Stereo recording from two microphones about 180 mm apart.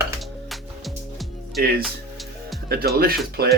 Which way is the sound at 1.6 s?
60° right (ahead or behind).